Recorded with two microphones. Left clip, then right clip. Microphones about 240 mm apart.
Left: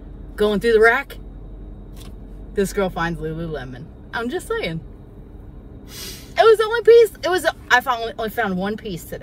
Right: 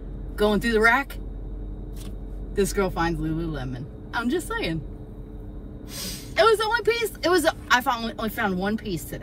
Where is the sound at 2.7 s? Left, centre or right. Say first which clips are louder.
Left 2 dB; centre.